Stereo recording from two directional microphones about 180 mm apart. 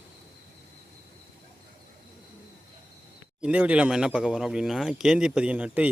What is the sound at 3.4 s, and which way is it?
Speech, 5° right (ahead or behind).